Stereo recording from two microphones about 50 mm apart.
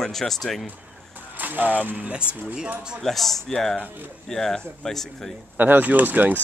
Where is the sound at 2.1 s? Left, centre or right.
Right.